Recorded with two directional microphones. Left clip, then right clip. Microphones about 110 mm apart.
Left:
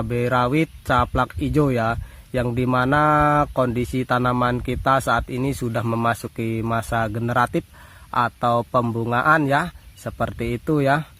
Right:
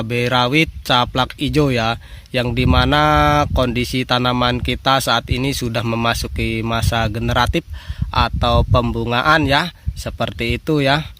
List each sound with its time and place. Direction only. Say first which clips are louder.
0.0 s speech: right 4 dB; 25° right (ahead or behind)